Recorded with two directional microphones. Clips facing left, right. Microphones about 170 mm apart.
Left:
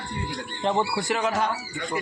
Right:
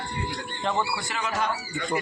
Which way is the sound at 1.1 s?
55° left (ahead or behind).